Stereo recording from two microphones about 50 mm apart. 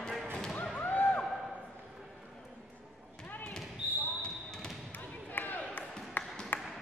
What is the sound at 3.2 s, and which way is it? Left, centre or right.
Basketball bounce, left.